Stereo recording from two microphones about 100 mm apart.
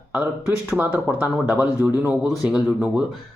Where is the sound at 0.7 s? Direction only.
15° right (ahead or behind).